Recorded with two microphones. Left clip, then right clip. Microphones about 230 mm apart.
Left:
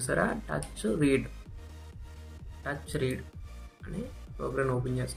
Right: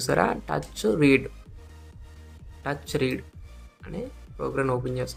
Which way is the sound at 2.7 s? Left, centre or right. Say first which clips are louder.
Right 6 dB; right.